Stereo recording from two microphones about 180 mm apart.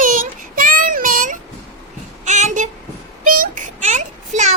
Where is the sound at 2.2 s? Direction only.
40° right (ahead or behind).